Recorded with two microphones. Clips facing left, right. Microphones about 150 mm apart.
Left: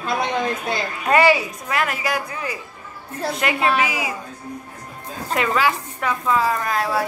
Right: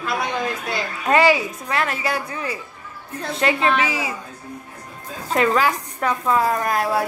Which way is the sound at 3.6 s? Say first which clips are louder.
Left 3 dB; 10° left (ahead or behind).